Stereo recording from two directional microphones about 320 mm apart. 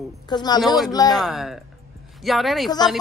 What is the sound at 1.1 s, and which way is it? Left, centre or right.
A man's voice, centre.